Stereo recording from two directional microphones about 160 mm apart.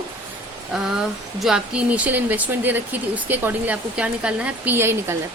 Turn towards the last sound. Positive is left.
turn(degrees=-15)  # may be behind; listen again after turning